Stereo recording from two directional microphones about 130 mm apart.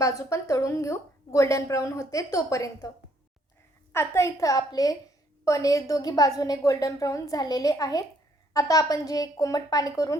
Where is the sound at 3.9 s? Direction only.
20° left (ahead or behind).